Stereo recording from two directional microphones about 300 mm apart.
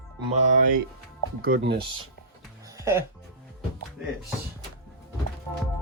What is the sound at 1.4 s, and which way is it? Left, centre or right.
Speech, right.